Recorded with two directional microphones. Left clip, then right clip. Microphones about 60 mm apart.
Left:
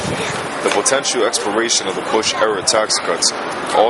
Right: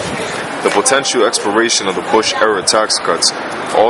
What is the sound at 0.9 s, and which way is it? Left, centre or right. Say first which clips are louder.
Speech: right 4 dB; right.